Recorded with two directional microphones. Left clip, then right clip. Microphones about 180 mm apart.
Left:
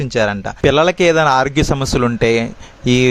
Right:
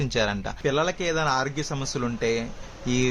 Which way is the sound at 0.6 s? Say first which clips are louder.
Left 13 dB; 50° left (ahead or behind).